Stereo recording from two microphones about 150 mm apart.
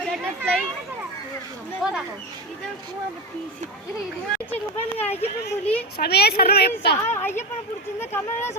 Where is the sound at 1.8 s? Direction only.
Centre (ahead or behind).